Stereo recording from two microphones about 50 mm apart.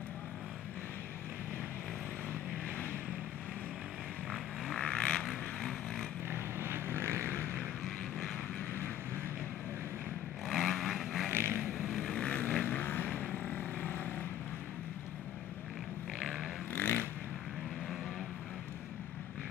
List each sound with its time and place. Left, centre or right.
4.3 s vehicle: centre
5.2 s vehicle: centre
6.3 s vehicle: right
10.5 s vehicle: centre
11.2 s vehicle: right
11.8 s vehicle: centre
12.3 s vehicle: left
12.6 s vehicle: left
16.2 s a sound: centre
16.7 s vehicle: left